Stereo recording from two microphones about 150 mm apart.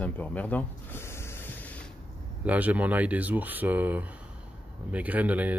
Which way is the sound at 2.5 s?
10° right (ahead or behind).